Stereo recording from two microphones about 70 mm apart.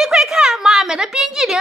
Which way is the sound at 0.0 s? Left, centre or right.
Centre.